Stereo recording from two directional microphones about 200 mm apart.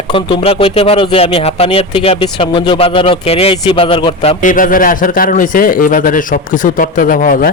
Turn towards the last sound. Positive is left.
turn(degrees=45)  # may be behind; listen again after turning